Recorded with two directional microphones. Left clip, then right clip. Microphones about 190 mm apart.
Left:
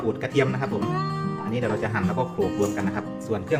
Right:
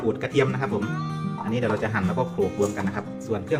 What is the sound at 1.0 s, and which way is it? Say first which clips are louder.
Music: left 4 dB; 65° left (ahead or behind).